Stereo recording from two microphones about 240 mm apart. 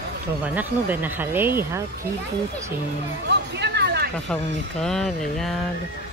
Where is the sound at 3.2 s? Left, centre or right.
Right.